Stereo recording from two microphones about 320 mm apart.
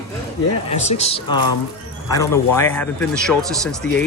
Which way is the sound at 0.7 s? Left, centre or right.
Left.